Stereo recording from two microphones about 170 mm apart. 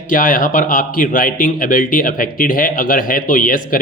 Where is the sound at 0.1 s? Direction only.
55° left (ahead or behind).